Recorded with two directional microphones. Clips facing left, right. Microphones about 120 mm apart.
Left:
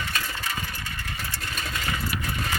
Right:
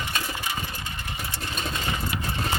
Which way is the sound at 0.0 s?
20° right (ahead or behind).